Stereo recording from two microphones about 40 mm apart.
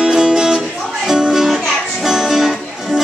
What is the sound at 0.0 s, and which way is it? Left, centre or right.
Music, centre.